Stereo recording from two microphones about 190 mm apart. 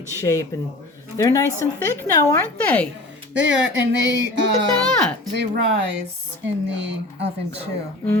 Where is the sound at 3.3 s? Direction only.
65° right (ahead or behind).